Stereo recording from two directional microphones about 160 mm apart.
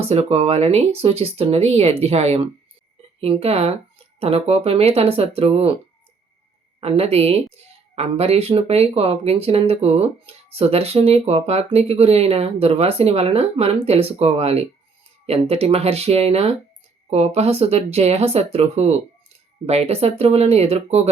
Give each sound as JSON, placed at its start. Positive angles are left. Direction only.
{"t": 0.0, "sound": "a woman's voice", "side_deg": -40}
{"t": 6.7, "sound": "a woman's voice", "side_deg": -40}